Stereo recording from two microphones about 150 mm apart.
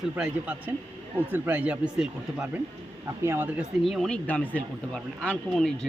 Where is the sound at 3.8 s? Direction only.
Centre (ahead or behind).